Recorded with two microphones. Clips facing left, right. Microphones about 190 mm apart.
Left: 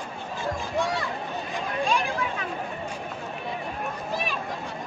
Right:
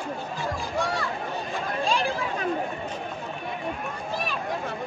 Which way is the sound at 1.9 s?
30° right (ahead or behind).